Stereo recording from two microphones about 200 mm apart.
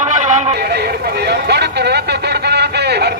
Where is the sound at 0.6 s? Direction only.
55° right (ahead or behind).